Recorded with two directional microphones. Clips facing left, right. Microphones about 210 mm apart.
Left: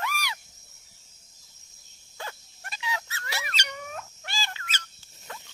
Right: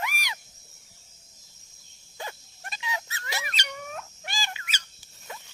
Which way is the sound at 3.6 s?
Centre (ahead or behind).